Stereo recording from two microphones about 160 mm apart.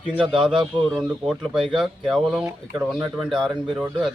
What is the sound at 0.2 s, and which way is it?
Speech, 30° right (ahead or behind).